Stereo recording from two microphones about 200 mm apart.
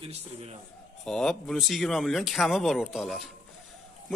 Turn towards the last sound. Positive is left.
turn(degrees=0)  # may be behind; listen again after turning